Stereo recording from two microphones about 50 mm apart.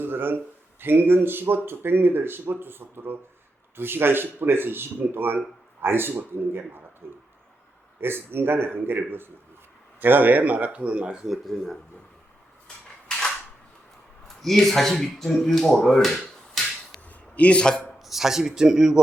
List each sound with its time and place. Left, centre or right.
0.0 s speech: right
11.3 s speech: centre
12.6 s a sound: centre
14.3 s speech: centre
15.8 s finger snapping: centre
17.1 s a sound: left
18.0 s speech: centre